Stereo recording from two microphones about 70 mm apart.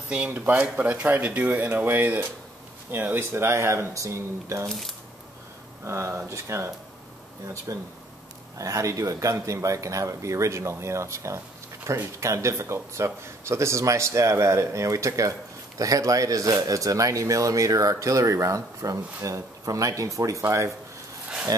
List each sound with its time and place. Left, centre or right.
0.5 s speech: right
4.6 s speech: centre
5.9 s speech: right